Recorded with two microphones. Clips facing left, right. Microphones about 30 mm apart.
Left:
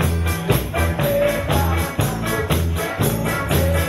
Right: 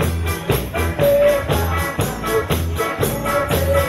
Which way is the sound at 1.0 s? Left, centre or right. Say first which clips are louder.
Right 6 dB; centre.